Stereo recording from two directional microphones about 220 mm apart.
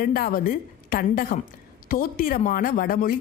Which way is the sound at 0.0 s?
40° left (ahead or behind).